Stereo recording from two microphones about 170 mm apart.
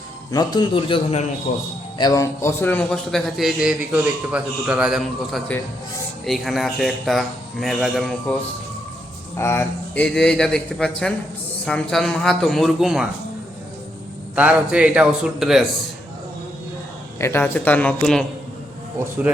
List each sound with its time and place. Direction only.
0.3 s a man's voice: 25° left (ahead or behind)
1.5 s a man's voice: 45° left (ahead or behind)
2.0 s a man's voice: 20° left (ahead or behind); by 8.4 s centre (ahead or behind)
9.4 s a man's voice: 15° left (ahead or behind); by 13.1 s 5° right (ahead or behind)
14.3 s a man's voice: 5° right (ahead or behind)
17.2 s a man's voice: 15° left (ahead or behind)